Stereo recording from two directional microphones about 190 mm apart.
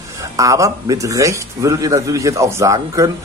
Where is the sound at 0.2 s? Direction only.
15° right (ahead or behind).